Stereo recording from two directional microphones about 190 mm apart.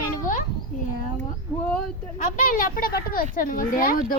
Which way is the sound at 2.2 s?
45° left (ahead or behind).